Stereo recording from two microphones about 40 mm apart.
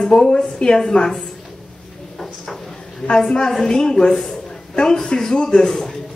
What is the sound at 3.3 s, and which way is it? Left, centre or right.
A woman's voice, centre.